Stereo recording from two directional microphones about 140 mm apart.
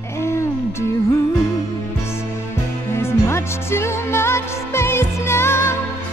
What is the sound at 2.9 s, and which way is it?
Music, 20° left (ahead or behind).